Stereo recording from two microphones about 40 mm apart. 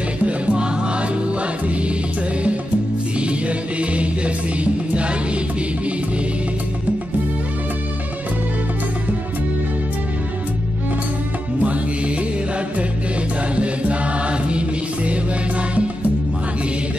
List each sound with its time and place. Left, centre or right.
0.2 s music: right
3.2 s music: right
11.6 s music: right
13.6 s music: right